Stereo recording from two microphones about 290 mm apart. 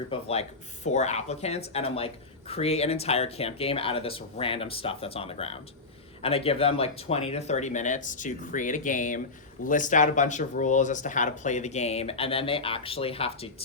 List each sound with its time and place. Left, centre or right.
0.1 s speech: left